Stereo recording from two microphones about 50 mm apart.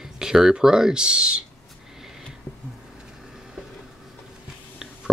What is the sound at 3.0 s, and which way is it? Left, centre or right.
Vehicle, centre.